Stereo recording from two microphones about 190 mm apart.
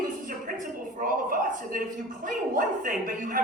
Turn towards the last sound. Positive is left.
turn(degrees=-45)  # may be behind; listen again after turning